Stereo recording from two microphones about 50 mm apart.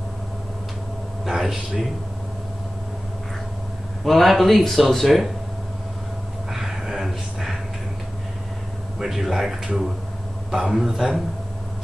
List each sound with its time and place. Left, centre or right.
1.2 s a man's voice: centre
4.0 s speech: centre
6.5 s a sound: centre
9.0 s a man's voice: centre